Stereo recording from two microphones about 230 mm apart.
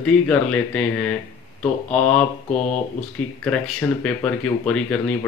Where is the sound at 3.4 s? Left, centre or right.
Centre.